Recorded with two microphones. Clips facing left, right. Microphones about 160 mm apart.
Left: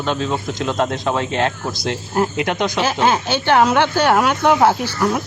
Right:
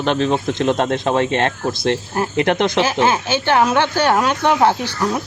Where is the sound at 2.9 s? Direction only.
15° left (ahead or behind).